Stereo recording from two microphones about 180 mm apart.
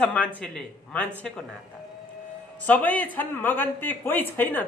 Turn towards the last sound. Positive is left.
turn(degrees=10)  # may be behind; listen again after turning